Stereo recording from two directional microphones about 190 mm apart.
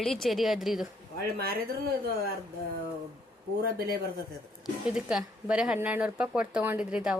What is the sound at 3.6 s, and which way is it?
Speech, 55° right (ahead or behind).